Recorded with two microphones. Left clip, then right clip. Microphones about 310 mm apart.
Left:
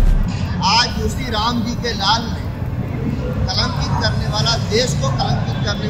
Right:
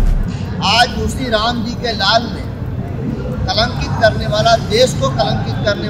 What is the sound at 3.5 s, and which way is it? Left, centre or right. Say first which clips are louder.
Speech: right 5 dB; right.